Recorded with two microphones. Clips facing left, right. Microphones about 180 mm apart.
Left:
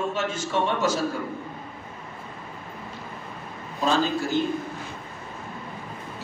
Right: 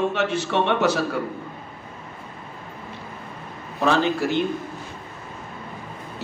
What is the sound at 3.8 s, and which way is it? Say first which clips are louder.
Speech: right 3 dB; 65° right (ahead or behind).